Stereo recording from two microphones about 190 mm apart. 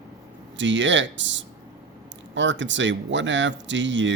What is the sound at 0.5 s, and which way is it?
Speech, 75° right (ahead or behind).